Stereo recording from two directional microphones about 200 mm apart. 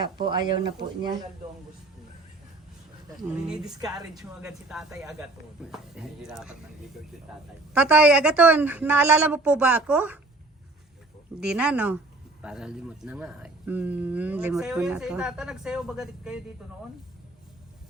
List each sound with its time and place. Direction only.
0.0 s speech: 20° right (ahead or behind)
3.2 s speech: 5° right (ahead or behind)
7.7 s a woman's voice: 5° right (ahead or behind)
11.3 s speech: 5° right (ahead or behind)